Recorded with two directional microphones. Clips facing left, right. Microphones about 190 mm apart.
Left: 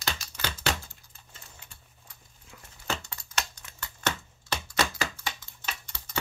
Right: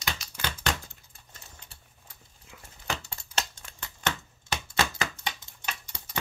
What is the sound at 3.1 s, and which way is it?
Typing, 25° right (ahead or behind).